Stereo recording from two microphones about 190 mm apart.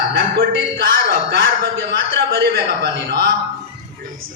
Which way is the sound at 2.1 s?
60° right (ahead or behind).